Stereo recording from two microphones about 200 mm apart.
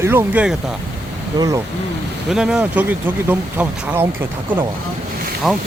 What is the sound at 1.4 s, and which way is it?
Speech, 15° right (ahead or behind).